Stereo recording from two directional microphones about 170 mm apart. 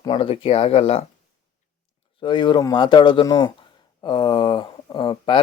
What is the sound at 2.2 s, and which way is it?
Speech, 25° left (ahead or behind).